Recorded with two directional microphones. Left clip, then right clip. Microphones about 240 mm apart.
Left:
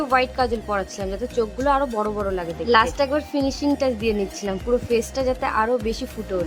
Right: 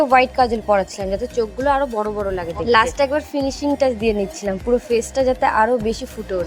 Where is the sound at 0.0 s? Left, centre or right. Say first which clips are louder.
Right 6 dB; centre.